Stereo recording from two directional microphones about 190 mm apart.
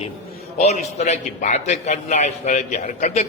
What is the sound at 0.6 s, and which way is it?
A man's voice, 35° left (ahead or behind).